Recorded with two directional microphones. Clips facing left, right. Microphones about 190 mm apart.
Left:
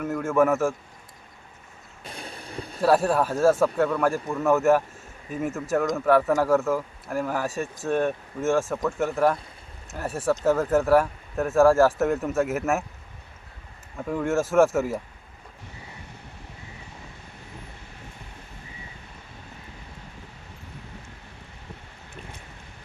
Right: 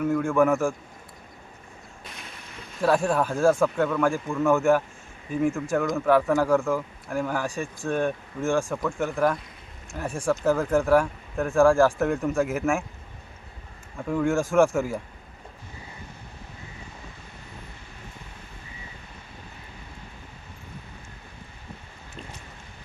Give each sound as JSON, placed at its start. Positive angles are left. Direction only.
{"t": 0.0, "sound": "speech", "side_deg": 5}
{"t": 2.0, "sound": "boat", "side_deg": 35}
{"t": 2.8, "sound": "speech", "side_deg": 5}
{"t": 14.1, "sound": "speech", "side_deg": 5}